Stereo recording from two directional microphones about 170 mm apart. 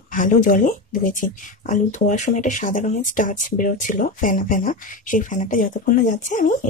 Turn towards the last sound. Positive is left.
turn(degrees=45)  # may be behind; listen again after turning